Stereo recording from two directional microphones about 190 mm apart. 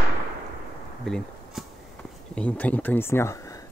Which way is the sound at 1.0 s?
Centre (ahead or behind).